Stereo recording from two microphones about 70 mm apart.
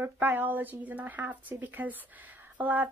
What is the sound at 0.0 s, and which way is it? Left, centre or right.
Speech, right.